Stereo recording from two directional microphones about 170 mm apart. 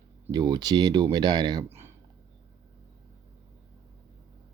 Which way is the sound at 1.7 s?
15° right (ahead or behind).